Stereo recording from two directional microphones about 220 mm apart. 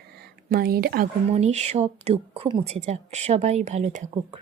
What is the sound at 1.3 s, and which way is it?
Speech, 30° right (ahead or behind).